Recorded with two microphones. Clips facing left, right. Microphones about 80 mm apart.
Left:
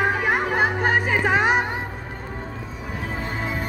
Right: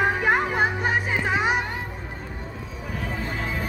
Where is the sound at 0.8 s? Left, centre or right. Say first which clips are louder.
Left 4 dB; left.